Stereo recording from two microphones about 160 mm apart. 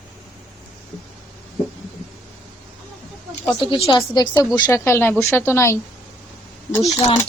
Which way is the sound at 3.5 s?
30° left (ahead or behind).